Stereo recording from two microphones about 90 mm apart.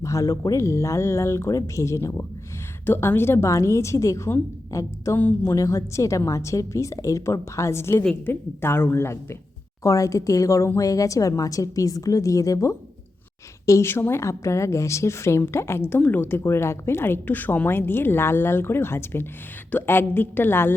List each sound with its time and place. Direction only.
0.0 s a woman's voice: 35° left (ahead or behind)
5.1 s a woman's voice: 25° left (ahead or behind)
9.8 s a woman's voice: 35° left (ahead or behind)